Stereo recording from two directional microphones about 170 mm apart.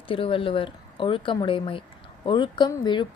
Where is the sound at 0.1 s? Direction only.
30° left (ahead or behind).